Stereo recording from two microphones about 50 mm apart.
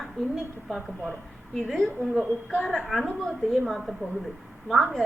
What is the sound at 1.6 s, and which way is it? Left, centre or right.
A woman's voice, centre.